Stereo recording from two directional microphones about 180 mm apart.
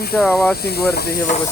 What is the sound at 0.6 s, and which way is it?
Speech, 60° left (ahead or behind).